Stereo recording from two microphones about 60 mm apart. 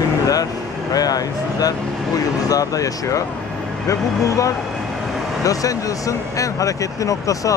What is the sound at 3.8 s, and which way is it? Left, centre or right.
Speech, left.